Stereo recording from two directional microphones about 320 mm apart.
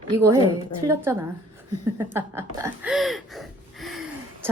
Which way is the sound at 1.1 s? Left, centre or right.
Centre.